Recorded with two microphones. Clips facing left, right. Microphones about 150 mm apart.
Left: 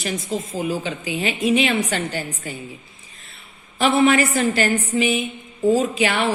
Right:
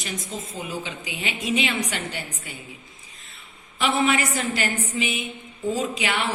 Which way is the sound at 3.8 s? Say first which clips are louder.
Left 6 dB; 35° left (ahead or behind).